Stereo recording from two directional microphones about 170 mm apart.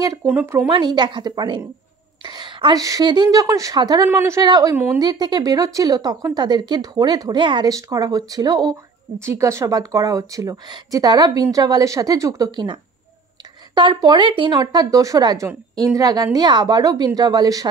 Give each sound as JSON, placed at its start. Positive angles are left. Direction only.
{"t": 0.0, "sound": "speech", "side_deg": -20}
{"t": 0.7, "sound": "speech", "side_deg": -25}
{"t": 13.7, "sound": "speech", "side_deg": -25}